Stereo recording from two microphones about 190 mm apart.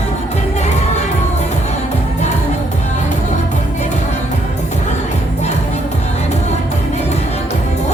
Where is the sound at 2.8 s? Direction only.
40° left (ahead or behind).